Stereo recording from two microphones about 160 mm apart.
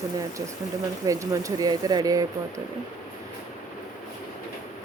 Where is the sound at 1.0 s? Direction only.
20° right (ahead or behind).